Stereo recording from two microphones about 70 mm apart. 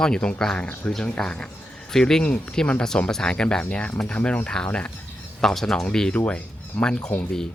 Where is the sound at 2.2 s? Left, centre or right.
Centre.